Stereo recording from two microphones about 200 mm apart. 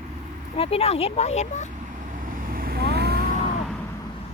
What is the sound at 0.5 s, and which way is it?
Speech, 30° left (ahead or behind).